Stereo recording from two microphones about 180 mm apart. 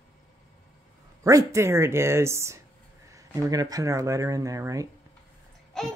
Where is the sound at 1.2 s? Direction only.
15° right (ahead or behind).